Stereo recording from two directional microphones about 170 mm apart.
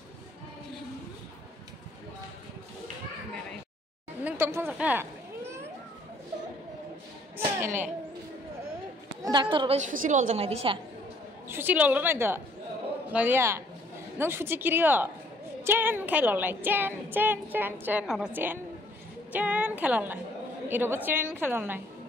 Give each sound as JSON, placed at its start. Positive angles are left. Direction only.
{"t": 4.2, "sound": "a woman's voice", "side_deg": -10}
{"t": 7.3, "sound": "a sound", "side_deg": -15}
{"t": 9.2, "sound": "a woman's voice", "side_deg": -25}
{"t": 9.8, "sound": "a woman's voice", "side_deg": -50}
{"t": 10.4, "sound": "a woman's voice", "side_deg": -35}
{"t": 11.4, "sound": "a woman's voice", "side_deg": -10}
{"t": 18.0, "sound": "a woman's voice", "side_deg": 0}
{"t": 18.3, "sound": "a woman's voice", "side_deg": -10}